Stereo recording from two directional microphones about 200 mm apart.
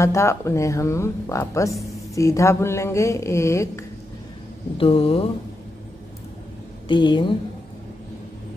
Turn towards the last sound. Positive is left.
turn(degrees=25)  # may be behind; listen again after turning